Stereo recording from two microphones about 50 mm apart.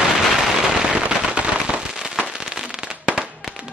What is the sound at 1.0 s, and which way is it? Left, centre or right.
Firecracker, right.